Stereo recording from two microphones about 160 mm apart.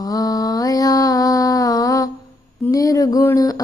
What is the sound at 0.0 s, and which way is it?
Mantra, 20° left (ahead or behind).